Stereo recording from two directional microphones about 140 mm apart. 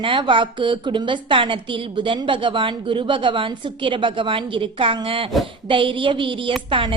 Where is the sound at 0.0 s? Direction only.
35° right (ahead or behind).